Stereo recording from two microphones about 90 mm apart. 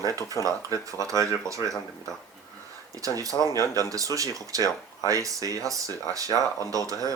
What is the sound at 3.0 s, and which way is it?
Speech, 40° right (ahead or behind).